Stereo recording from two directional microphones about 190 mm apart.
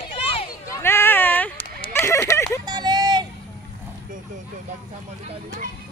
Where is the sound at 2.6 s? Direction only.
20° right (ahead or behind).